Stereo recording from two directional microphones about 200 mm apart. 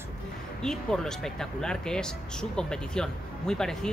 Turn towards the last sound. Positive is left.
turn(degrees=5)  # may be behind; listen again after turning